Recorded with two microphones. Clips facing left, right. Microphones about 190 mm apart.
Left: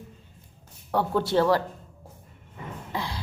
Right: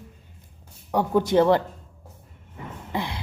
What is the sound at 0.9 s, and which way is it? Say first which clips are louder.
Speech: right 3 dB; 15° right (ahead or behind).